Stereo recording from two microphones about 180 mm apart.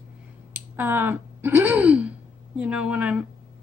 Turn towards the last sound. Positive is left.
turn(degrees=-5)  # may be behind; listen again after turning